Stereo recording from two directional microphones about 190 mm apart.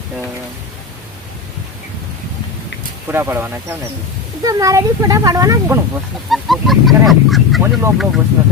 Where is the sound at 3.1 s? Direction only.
10° right (ahead or behind).